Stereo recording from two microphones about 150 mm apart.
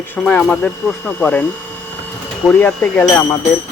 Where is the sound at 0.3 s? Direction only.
10° left (ahead or behind).